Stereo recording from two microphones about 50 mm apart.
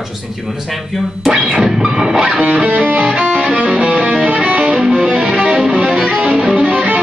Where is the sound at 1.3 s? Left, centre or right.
Centre.